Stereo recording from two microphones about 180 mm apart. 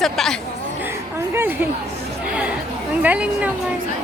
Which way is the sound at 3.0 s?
5° right (ahead or behind).